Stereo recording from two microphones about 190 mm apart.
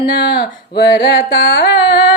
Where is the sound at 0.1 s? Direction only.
60° left (ahead or behind).